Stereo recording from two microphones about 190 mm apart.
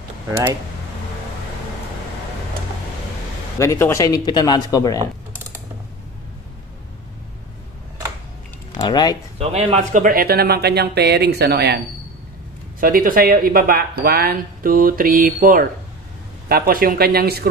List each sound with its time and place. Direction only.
3.5 s speech: 15° left (ahead or behind)
8.7 s speech: 20° left (ahead or behind)
9.4 s speech: 30° right (ahead or behind)
10.0 s speech: 50° right (ahead or behind)
12.8 s speech: 50° right (ahead or behind)